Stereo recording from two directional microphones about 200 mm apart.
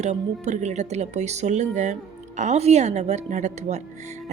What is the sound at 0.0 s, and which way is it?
Speech, 35° right (ahead or behind).